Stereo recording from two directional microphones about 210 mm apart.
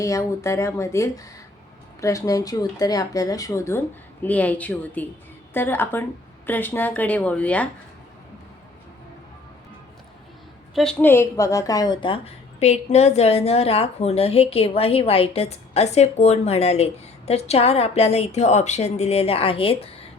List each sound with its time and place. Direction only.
0.0 s speech: 15° left (ahead or behind)
10.8 s a woman's voice: 5° left (ahead or behind); by 19.9 s 25° left (ahead or behind)